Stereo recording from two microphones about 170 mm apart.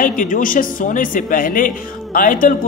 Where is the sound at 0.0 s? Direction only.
50° left (ahead or behind).